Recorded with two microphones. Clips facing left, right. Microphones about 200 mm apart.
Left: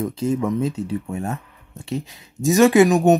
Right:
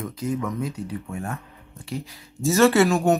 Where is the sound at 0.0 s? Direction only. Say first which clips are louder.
Left 6 dB; 30° left (ahead or behind).